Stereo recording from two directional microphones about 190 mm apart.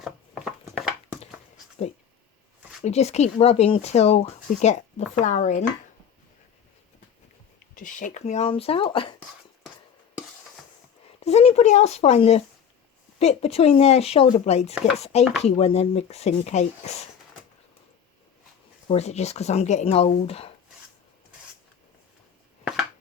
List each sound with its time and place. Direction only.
0.0 s a sound: 5° right (ahead or behind)
2.8 s speech: 35° left (ahead or behind)
7.8 s speech: 45° left (ahead or behind); by 9.1 s 25° left (ahead or behind)
11.2 s speech: 35° left (ahead or behind)
18.9 s speech: 35° left (ahead or behind)